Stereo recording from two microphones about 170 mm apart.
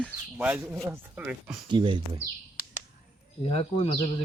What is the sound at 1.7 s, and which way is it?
Speech, 25° right (ahead or behind).